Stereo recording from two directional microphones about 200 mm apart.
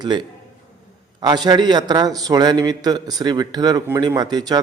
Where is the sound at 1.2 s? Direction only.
20° right (ahead or behind).